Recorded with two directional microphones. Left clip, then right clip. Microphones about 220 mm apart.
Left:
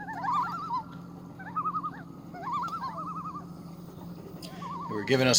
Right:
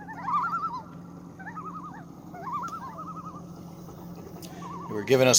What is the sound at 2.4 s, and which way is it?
Turkey, 40° left (ahead or behind).